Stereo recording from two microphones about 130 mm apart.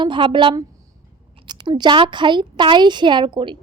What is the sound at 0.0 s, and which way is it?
A woman's voice, 40° right (ahead or behind).